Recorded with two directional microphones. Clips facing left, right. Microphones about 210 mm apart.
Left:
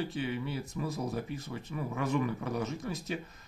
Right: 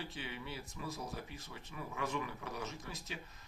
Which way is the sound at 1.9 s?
45° left (ahead or behind).